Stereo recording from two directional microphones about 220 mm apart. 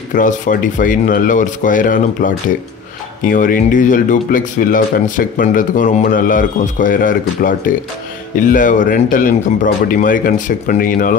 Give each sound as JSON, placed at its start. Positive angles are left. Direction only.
{"t": 0.1, "sound": "speech", "side_deg": 35}